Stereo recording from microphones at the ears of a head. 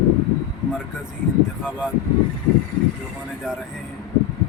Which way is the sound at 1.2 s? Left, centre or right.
Left.